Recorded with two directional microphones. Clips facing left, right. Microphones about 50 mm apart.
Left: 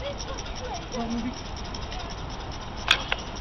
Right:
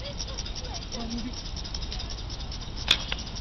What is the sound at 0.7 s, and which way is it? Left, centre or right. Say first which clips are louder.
Speech: left 6 dB; left.